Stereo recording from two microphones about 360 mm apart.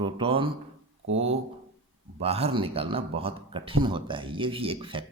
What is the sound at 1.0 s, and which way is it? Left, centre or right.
Speech, right.